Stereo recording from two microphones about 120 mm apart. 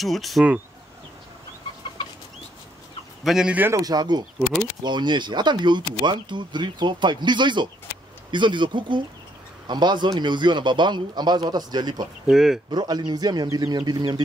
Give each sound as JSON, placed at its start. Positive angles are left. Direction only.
{"t": 0.0, "sound": "speech", "side_deg": 0}
{"t": 3.3, "sound": "speech", "side_deg": -5}
{"t": 3.5, "sound": "a man's voice", "side_deg": -20}
{"t": 3.8, "sound": "speech", "side_deg": -35}
{"t": 12.3, "sound": "speech", "side_deg": -5}
{"t": 12.7, "sound": "speech", "side_deg": -35}